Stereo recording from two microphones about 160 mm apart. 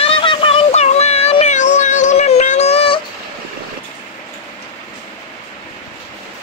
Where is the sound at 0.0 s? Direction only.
35° left (ahead or behind).